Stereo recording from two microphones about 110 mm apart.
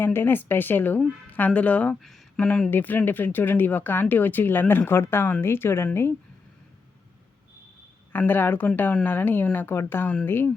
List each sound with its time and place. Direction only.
0.0 s a woman's voice: 20° left (ahead or behind)
8.1 s a woman's voice: 20° left (ahead or behind)